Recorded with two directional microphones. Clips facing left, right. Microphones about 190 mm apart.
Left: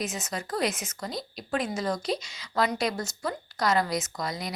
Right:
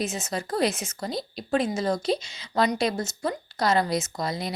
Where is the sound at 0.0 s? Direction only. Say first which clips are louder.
Right 3 dB; 30° right (ahead or behind).